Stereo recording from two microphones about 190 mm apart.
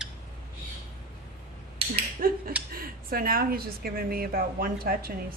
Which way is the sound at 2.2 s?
50° right (ahead or behind).